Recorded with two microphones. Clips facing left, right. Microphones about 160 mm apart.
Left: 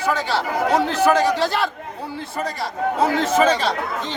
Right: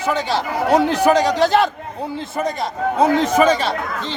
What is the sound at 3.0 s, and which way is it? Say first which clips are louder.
Speech: right 3 dB; 15° right (ahead or behind).